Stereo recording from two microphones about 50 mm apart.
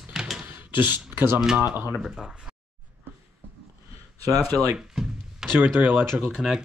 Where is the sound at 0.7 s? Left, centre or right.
Right.